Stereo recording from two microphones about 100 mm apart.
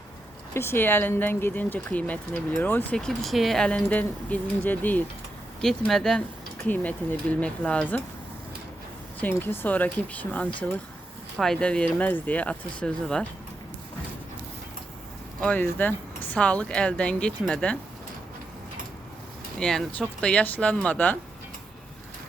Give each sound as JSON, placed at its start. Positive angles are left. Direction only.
{"t": 0.5, "sound": "speech", "side_deg": 25}
{"t": 3.0, "sound": "speech", "side_deg": 5}
{"t": 5.6, "sound": "speech", "side_deg": 5}
{"t": 6.7, "sound": "speech", "side_deg": 15}
{"t": 9.4, "sound": "speech", "side_deg": 20}
{"t": 15.4, "sound": "speech", "side_deg": 10}
{"t": 19.5, "sound": "speech", "side_deg": 5}